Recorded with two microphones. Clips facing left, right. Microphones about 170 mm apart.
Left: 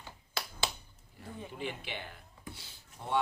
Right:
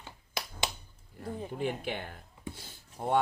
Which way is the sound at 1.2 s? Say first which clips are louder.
Right 6 dB; 40° right (ahead or behind).